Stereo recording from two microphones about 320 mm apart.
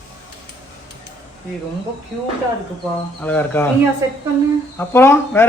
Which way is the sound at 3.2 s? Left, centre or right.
Centre.